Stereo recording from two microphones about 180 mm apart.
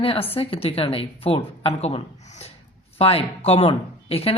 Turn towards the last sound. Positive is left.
turn(degrees=35)  # may be behind; listen again after turning